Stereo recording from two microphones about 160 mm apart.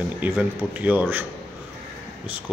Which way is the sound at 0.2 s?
10° right (ahead or behind).